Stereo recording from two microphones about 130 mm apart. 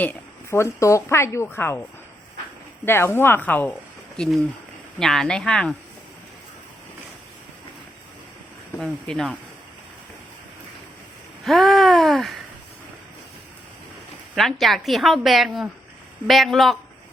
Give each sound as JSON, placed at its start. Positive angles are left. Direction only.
{"t": 0.0, "sound": "a woman's voice", "side_deg": 15}
{"t": 2.8, "sound": "a woman's voice", "side_deg": 20}
{"t": 8.8, "sound": "a woman's voice", "side_deg": 0}
{"t": 11.4, "sound": "a sound", "side_deg": 0}
{"t": 14.3, "sound": "a woman's voice", "side_deg": 0}